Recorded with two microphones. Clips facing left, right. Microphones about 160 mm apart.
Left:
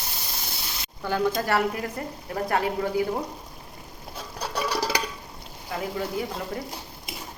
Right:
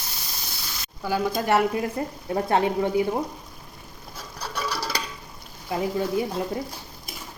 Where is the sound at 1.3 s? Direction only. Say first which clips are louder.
Right 3 dB; 20° right (ahead or behind).